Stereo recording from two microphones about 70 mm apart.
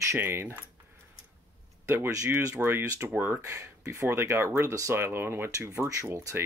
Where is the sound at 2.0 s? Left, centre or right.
Right.